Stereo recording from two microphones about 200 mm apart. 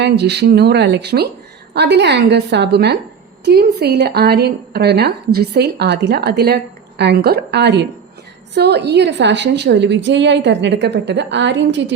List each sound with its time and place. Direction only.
0.0 s a woman's voice: 55° right (ahead or behind)